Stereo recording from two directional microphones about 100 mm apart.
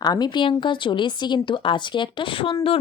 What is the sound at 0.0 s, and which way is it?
Speech, 45° left (ahead or behind).